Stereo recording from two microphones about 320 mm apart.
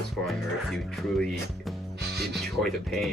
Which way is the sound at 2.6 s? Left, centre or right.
Centre.